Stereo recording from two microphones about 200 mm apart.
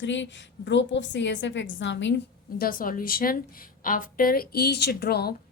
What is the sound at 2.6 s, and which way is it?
A woman's voice, 45° left (ahead or behind).